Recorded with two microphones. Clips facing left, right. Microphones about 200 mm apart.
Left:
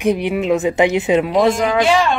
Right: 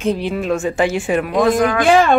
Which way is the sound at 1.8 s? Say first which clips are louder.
Right 6 dB; 50° right (ahead or behind).